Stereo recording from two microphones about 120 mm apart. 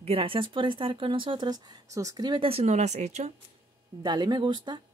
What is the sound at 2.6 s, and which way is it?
Speech, 70° right (ahead or behind).